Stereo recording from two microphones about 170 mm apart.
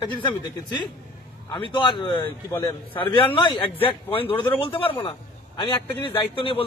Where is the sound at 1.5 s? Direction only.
30° left (ahead or behind).